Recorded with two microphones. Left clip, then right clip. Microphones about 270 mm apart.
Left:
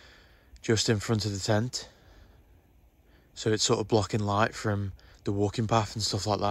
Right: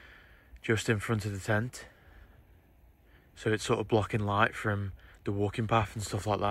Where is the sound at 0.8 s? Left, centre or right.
Centre.